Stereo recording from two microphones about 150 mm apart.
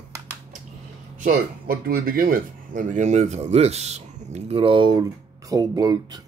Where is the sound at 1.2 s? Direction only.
75° right (ahead or behind); by 6.2 s 25° right (ahead or behind).